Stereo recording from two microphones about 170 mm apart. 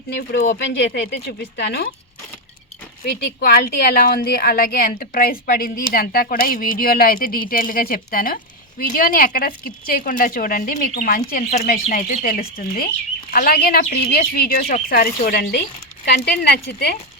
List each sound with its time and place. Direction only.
0.1 s speech: 70° left (ahead or behind); by 0.9 s 90° left
1.3 s speech: 75° left (ahead or behind)
3.1 s a woman's voice: 70° left (ahead or behind)
16.0 s speech: 75° left (ahead or behind)